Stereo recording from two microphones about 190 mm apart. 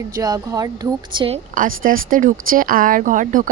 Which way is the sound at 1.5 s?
45° right (ahead or behind).